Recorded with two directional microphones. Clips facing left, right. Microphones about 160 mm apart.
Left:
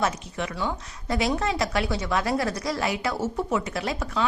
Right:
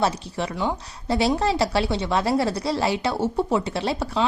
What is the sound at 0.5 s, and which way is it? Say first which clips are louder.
Speech: right 4 dB; 20° right (ahead or behind).